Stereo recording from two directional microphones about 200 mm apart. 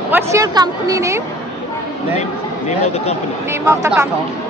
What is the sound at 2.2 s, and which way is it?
Speech, 35° left (ahead or behind).